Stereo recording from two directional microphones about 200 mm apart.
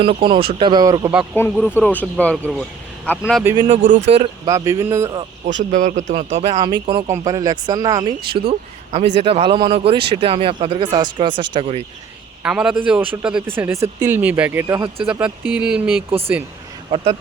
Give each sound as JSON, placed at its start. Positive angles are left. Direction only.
{"t": 0.0, "sound": "speech", "side_deg": -25}
{"t": 1.4, "sound": "speech", "side_deg": 10}
{"t": 3.7, "sound": "a man's voice", "side_deg": -35}
{"t": 4.4, "sound": "speech", "side_deg": -15}
{"t": 5.7, "sound": "a man's voice", "side_deg": -40}
{"t": 6.6, "sound": "speech", "side_deg": -25}
{"t": 12.4, "sound": "a man's voice", "side_deg": -5}
{"t": 16.0, "sound": "speech", "side_deg": -30}